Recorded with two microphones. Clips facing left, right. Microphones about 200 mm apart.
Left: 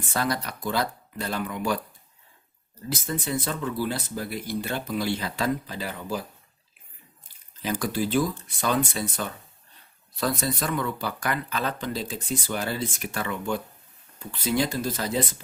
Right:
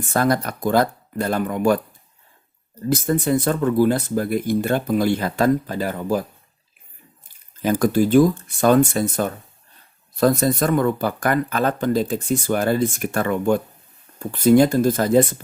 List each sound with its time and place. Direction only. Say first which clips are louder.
0.1 s speech: right 8 dB; 50° right (ahead or behind)
2.9 s speech: right 10 dB; 55° right (ahead or behind)
7.6 s speech: right 9 dB; 50° right (ahead or behind)